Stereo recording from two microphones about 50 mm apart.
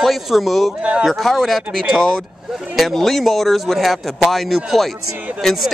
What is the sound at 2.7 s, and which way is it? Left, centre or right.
Speech, centre.